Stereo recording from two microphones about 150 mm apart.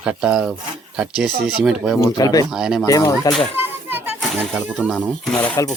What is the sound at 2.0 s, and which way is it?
Speech, 25° left (ahead or behind).